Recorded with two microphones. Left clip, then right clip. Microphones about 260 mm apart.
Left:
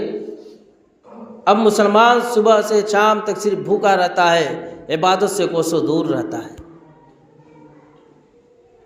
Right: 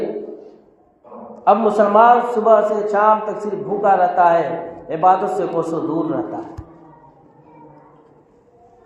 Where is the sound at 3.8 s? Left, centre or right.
Left.